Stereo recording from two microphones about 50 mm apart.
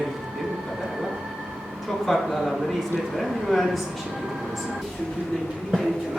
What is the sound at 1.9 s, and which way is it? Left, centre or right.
Speech, centre.